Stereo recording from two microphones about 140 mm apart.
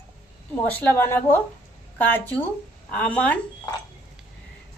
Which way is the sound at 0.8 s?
15° left (ahead or behind).